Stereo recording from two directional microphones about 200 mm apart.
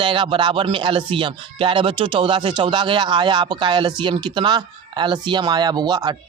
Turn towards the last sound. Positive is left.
turn(degrees=-20)  # may be behind; listen again after turning